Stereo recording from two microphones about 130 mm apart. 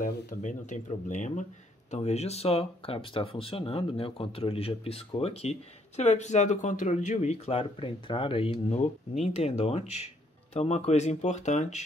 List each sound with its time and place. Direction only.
0.0 s speech: 85° left
1.9 s speech: 55° left (ahead or behind)